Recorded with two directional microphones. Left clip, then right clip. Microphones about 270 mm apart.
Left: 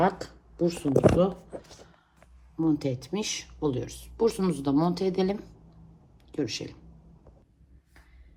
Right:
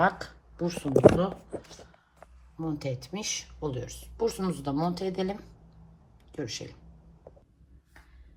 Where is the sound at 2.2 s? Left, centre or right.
Left.